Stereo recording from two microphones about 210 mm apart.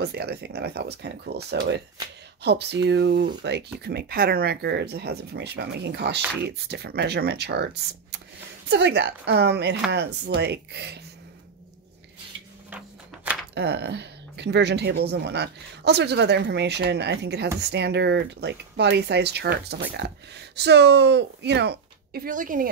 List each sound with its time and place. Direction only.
0.0 s speech: 50° right (ahead or behind)
12.7 s a sound: 5° right (ahead or behind)
13.6 s speech: 50° right (ahead or behind)